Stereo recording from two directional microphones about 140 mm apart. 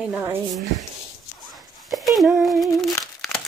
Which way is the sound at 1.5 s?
Centre (ahead or behind).